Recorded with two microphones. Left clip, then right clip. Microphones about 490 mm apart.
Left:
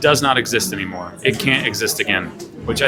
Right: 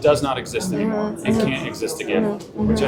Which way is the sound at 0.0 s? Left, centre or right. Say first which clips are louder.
Left 3 dB; left.